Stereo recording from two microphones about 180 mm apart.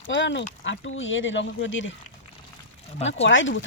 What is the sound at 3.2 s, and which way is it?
Speech, 90° left.